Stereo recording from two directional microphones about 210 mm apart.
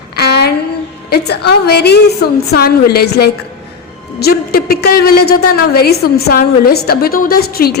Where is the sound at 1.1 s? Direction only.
50° left (ahead or behind).